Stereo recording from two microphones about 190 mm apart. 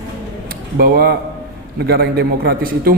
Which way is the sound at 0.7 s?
55° right (ahead or behind).